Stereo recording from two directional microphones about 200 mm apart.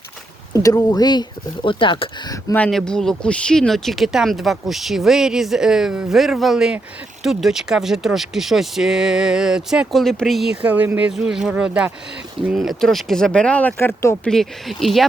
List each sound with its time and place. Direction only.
0.6 s speech: 20° left (ahead or behind)
2.6 s speech: 5° left (ahead or behind)
14.3 s speech: centre (ahead or behind)